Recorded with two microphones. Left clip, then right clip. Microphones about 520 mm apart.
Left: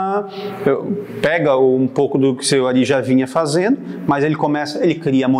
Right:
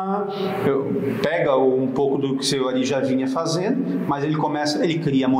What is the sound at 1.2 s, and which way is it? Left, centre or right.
Speech, left.